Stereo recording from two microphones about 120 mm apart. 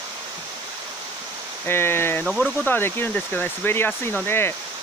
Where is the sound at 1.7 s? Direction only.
20° left (ahead or behind).